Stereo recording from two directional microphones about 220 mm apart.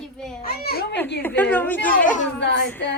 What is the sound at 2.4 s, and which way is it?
Speech, 50° left (ahead or behind).